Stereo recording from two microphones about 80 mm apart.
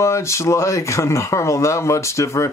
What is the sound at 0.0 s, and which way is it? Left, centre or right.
Speech, left.